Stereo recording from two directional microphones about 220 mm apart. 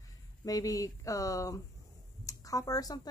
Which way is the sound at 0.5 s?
15° left (ahead or behind).